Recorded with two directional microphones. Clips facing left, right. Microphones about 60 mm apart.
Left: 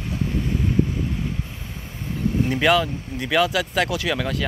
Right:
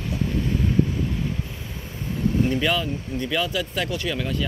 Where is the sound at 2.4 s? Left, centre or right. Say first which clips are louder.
Left 7 dB; left.